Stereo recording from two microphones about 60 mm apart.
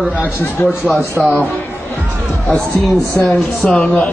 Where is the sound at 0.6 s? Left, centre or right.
Left.